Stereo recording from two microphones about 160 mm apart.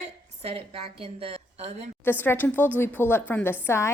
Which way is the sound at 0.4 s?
35° right (ahead or behind).